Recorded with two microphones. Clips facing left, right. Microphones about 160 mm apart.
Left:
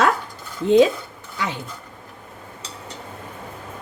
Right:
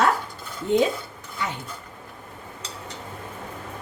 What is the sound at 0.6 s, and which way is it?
Speech, 90° left.